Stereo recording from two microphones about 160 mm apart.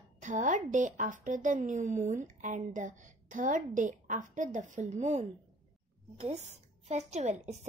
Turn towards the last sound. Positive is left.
turn(degrees=-45)  # may be behind; listen again after turning